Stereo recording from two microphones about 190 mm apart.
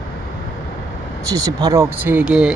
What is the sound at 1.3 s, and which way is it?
Speech, 20° right (ahead or behind).